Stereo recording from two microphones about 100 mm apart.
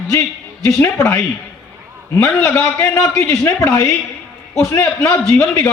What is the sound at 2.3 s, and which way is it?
Speech, 15° left (ahead or behind).